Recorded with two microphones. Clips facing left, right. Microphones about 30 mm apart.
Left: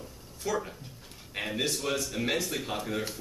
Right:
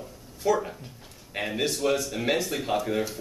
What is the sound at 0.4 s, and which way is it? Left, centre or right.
Speech, centre.